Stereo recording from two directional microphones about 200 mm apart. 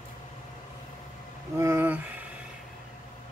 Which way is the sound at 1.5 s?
10° right (ahead or behind).